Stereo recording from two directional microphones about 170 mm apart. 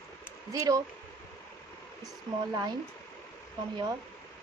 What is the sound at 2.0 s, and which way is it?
Speech, 20° right (ahead or behind).